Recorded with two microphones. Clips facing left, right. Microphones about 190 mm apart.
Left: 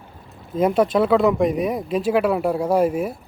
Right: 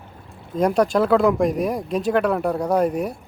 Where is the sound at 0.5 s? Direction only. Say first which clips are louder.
Left 1 dB; 5° left (ahead or behind).